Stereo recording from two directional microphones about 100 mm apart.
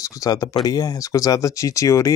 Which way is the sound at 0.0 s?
35° left (ahead or behind).